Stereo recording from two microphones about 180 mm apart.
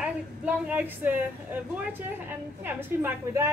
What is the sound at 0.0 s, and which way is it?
A woman's voice, 10° right (ahead or behind).